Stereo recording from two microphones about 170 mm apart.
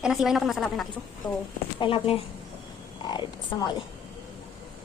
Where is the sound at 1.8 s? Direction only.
30° left (ahead or behind).